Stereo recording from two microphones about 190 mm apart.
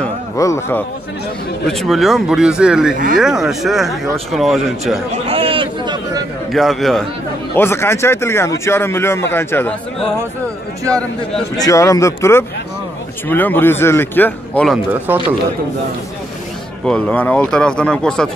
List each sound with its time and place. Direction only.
0.0 s a sound: 15° left (ahead or behind)
1.7 s speech: centre (ahead or behind)
5.3 s a man's voice: 30° right (ahead or behind)
6.5 s speech: centre (ahead or behind)
7.5 s speech: 10° left (ahead or behind)
11.6 s speech: 15° left (ahead or behind)
16.8 s speech: 5° left (ahead or behind)